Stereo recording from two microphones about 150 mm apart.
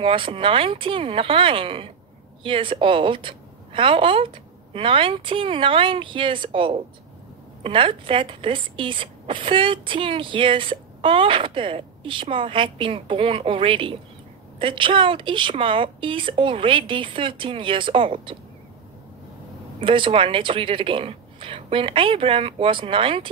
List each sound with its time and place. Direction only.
0.0 s speech: 35° right (ahead or behind)
19.8 s speech: 35° right (ahead or behind)